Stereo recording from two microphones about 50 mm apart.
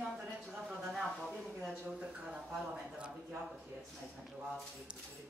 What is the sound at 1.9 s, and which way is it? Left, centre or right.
A man's voice, right.